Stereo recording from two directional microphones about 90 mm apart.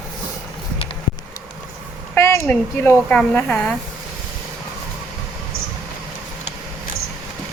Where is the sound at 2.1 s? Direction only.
30° left (ahead or behind).